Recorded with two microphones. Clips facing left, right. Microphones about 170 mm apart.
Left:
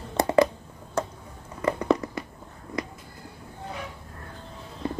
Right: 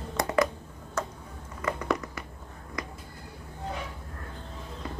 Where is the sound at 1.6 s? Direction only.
30° left (ahead or behind).